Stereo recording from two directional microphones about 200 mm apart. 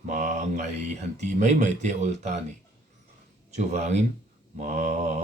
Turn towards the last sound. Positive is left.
turn(degrees=-35)  # may be behind; listen again after turning